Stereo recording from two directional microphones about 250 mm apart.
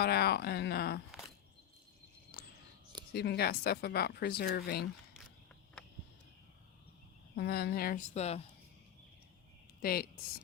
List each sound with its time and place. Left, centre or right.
0.0 s speech: left
2.3 s a sound: left
3.1 s speech: left
7.3 s speech: left
9.8 s speech: left